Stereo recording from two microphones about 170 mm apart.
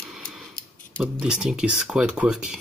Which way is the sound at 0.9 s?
5° right (ahead or behind).